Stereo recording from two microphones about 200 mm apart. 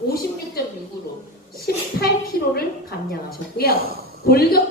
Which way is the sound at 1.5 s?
50° left (ahead or behind).